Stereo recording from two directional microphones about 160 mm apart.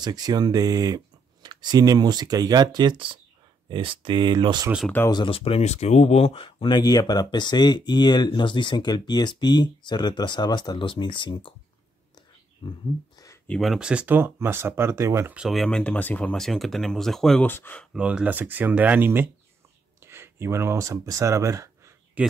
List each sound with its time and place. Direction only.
0.0 s speech: 25° right (ahead or behind)
4.8 s speech: 10° left (ahead or behind)
5.1 s speech: 35° left (ahead or behind)
12.6 s a sound: 35° left (ahead or behind)
13.5 s speech: centre (ahead or behind); by 15.3 s 15° right (ahead or behind)
15.3 s speech: centre (ahead or behind)
17.9 s speech: 5° right (ahead or behind)
22.2 s speech: 10° right (ahead or behind)